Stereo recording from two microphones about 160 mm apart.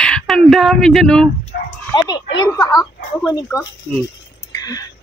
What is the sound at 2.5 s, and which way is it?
Speech, 20° left (ahead or behind).